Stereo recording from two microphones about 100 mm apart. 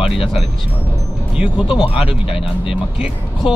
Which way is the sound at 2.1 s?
70° left (ahead or behind).